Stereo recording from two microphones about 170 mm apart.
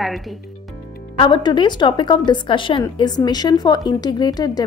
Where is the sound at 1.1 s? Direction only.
30° left (ahead or behind).